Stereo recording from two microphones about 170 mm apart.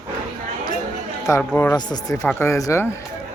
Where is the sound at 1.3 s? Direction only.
20° left (ahead or behind).